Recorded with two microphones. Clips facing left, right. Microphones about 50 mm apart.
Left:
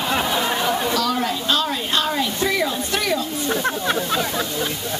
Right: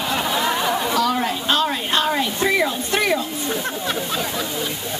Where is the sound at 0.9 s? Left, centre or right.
Centre.